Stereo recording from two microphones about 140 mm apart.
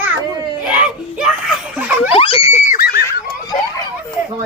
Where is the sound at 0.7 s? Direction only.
5° right (ahead or behind).